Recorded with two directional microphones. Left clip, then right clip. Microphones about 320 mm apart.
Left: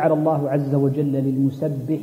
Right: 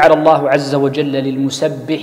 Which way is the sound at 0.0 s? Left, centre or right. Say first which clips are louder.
Right 10 dB; centre.